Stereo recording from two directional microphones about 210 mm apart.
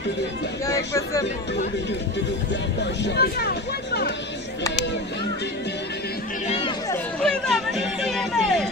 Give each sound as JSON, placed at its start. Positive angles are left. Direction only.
{"t": 0.7, "sound": "speech", "side_deg": 15}
{"t": 2.8, "sound": "speech", "side_deg": 55}
{"t": 6.4, "sound": "speech", "side_deg": 30}
{"t": 7.2, "sound": "speech", "side_deg": 0}